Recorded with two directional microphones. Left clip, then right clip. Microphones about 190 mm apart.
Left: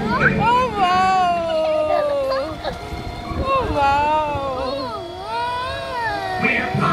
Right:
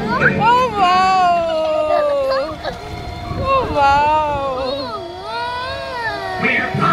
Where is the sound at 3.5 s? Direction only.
35° right (ahead or behind).